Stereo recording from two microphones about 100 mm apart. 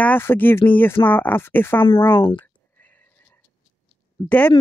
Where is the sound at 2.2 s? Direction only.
60° left (ahead or behind).